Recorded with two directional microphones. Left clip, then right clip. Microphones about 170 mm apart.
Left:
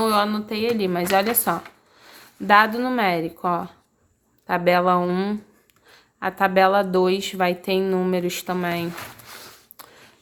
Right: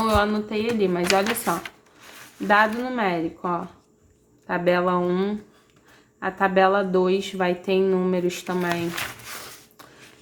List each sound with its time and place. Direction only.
0.0 s speech: 25° left (ahead or behind)